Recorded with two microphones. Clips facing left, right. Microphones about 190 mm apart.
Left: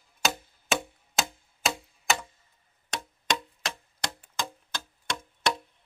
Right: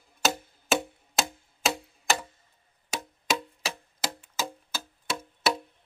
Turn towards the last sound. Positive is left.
turn(degrees=-5)  # may be behind; listen again after turning